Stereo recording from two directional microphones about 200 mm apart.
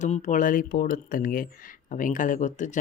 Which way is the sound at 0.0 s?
40° left (ahead or behind).